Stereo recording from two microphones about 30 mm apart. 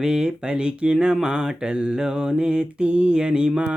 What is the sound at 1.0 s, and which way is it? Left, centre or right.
Mantra, right.